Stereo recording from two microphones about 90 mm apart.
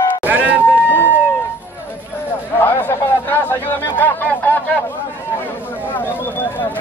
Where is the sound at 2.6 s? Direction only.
25° left (ahead or behind).